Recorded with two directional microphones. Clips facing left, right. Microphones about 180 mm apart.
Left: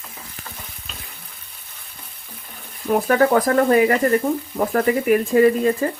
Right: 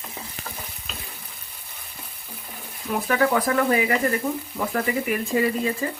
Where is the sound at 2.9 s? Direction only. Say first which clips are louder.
Left 6 dB; 50° left (ahead or behind).